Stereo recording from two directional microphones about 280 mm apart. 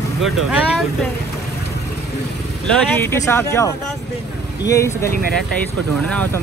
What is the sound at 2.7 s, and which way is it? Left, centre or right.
Speech, centre.